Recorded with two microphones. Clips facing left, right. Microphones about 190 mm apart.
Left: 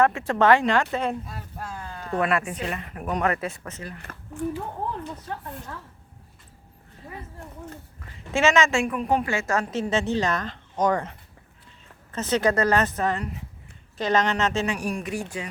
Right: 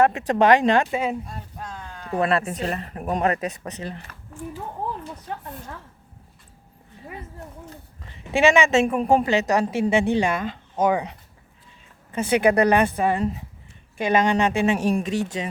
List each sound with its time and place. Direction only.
0.0 s speech: 20° right (ahead or behind); by 2.1 s 5° left (ahead or behind)
2.2 s speech: 35° right (ahead or behind)
4.0 s a woman's voice: 65° left (ahead or behind)
8.3 s a woman's voice: 15° right (ahead or behind)
9.0 s a woman's voice: 35° right (ahead or behind)
9.2 s a woman's voice: 20° right (ahead or behind)